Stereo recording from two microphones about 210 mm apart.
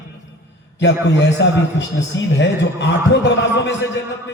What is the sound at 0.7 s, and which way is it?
Speech, 55° left (ahead or behind).